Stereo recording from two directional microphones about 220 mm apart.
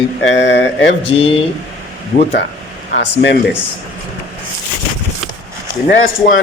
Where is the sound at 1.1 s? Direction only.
25° left (ahead or behind).